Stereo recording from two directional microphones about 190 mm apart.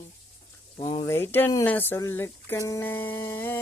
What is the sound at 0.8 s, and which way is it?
Speech, 25° left (ahead or behind).